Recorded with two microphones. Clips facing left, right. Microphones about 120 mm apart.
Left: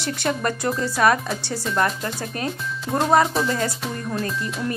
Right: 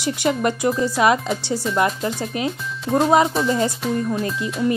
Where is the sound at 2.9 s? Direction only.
Centre (ahead or behind).